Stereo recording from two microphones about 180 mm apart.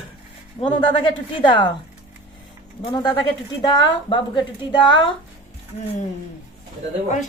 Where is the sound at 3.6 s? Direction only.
25° left (ahead or behind).